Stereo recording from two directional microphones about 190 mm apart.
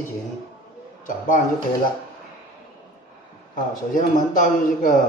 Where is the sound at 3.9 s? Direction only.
45° left (ahead or behind).